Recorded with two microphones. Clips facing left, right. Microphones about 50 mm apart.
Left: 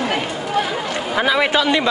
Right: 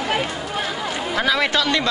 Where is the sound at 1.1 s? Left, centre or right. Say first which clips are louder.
Left 3 dB; centre.